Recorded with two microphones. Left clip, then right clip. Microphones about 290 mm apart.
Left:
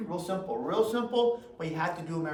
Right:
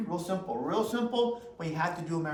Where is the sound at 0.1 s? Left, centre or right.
Centre.